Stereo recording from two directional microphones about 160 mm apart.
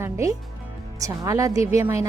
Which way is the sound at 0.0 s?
20° right (ahead or behind).